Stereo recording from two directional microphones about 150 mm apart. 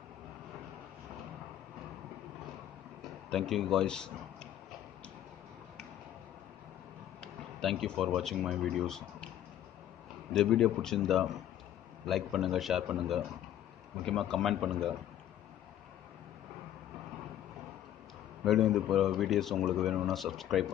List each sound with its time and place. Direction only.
3.3 s speech: centre (ahead or behind)
7.2 s a sound: 5° left (ahead or behind)
8.4 s a man's voice: centre (ahead or behind)
10.3 s a man's voice: 5° left (ahead or behind)
18.4 s a man's voice: centre (ahead or behind)